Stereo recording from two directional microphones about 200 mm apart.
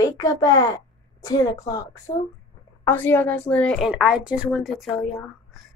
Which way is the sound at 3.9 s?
5° right (ahead or behind).